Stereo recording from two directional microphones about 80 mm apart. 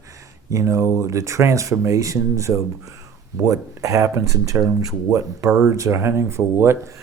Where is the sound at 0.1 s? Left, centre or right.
Right.